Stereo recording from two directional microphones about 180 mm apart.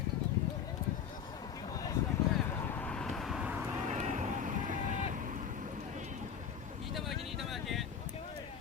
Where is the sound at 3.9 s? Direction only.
40° right (ahead or behind).